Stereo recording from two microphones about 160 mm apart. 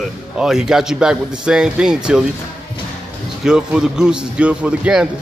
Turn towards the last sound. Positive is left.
turn(degrees=-5)  # may be behind; listen again after turning